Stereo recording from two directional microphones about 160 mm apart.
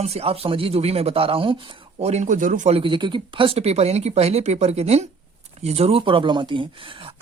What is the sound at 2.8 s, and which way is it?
Speech, 30° right (ahead or behind).